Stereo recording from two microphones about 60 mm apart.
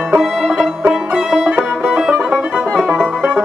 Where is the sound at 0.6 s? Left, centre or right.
Centre.